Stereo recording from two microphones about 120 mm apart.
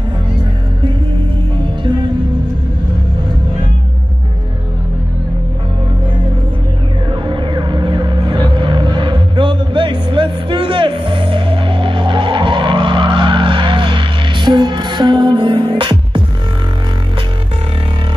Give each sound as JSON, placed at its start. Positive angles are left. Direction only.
{"t": 7.1, "sound": "music", "side_deg": -40}